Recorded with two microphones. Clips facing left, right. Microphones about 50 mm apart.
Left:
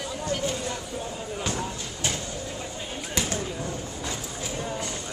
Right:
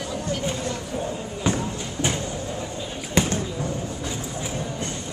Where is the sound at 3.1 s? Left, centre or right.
Right.